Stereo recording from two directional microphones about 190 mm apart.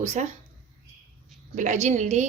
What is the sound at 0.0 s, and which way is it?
Speech, 35° right (ahead or behind).